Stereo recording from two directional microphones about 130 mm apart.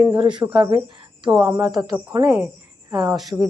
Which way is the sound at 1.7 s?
30° right (ahead or behind).